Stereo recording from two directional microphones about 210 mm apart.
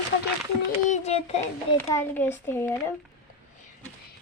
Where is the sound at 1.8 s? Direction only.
10° left (ahead or behind).